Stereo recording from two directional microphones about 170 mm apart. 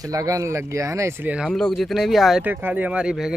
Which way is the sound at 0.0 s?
20° right (ahead or behind).